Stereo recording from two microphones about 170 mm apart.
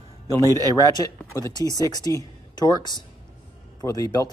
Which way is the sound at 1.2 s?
15° left (ahead or behind).